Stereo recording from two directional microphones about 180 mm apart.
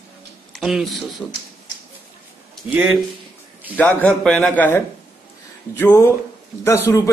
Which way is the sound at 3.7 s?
10° left (ahead or behind).